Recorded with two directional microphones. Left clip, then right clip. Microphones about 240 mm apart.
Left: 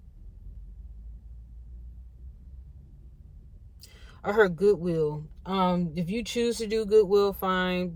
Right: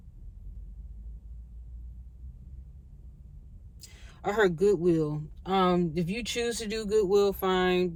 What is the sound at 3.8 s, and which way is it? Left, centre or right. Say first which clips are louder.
Speech: even; centre.